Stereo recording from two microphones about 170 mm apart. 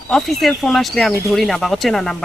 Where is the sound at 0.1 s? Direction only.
Centre (ahead or behind).